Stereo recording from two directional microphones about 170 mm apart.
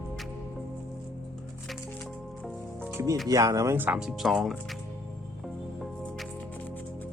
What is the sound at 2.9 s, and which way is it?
Music, 20° right (ahead or behind).